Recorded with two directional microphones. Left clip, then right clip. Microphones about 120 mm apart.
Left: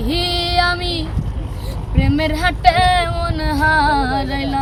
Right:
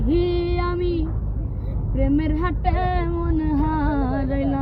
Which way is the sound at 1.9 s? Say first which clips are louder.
Left 4 dB; 50° left (ahead or behind).